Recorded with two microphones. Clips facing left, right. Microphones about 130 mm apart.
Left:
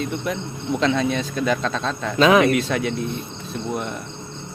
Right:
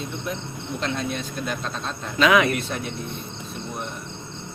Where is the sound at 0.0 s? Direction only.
80° left.